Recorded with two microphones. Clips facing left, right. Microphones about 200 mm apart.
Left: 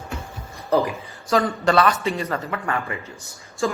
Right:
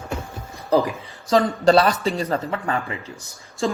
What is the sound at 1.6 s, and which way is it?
A man's voice, 35° right (ahead or behind).